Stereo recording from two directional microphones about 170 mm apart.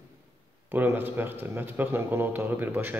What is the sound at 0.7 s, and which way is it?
Speech, 10° right (ahead or behind).